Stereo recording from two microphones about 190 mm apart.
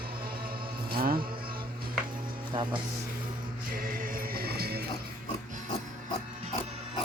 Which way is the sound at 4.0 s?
50° right (ahead or behind).